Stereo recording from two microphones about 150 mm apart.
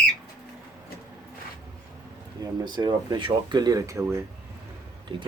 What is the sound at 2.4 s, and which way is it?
Speech, 30° right (ahead or behind).